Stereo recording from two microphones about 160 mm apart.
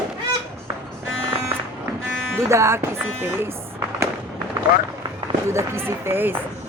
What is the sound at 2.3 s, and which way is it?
Speech, 15° right (ahead or behind).